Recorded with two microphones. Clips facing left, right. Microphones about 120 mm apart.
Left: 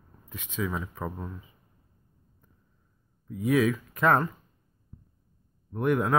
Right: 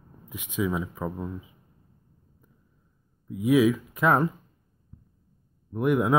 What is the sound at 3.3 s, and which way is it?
Speech, 5° right (ahead or behind).